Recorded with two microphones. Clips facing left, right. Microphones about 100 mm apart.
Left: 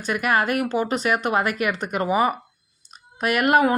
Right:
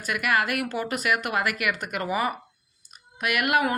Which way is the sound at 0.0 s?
30° left (ahead or behind).